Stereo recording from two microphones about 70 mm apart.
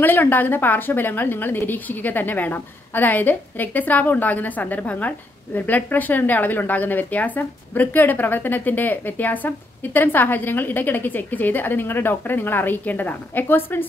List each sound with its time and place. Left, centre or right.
0.0 s a woman's voice: left